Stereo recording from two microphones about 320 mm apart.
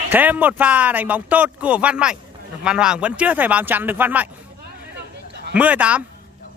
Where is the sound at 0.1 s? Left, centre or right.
Centre.